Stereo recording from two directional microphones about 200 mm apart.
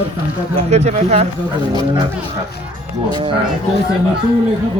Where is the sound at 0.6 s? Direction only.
35° right (ahead or behind).